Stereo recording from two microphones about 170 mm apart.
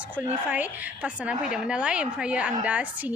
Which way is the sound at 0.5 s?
10° right (ahead or behind).